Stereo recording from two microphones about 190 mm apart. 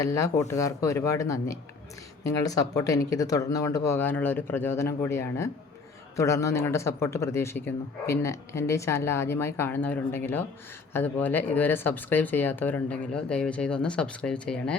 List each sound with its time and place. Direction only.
0.0 s speech: 15° left (ahead or behind)